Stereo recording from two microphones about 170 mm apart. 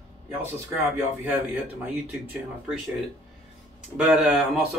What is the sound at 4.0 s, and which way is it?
Speech, 5° right (ahead or behind).